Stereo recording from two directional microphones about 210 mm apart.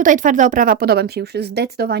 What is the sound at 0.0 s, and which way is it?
A woman's voice, 40° right (ahead or behind).